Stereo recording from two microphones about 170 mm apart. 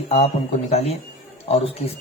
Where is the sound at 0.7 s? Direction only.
35° left (ahead or behind).